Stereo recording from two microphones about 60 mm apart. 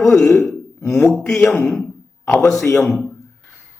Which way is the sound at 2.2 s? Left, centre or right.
Left.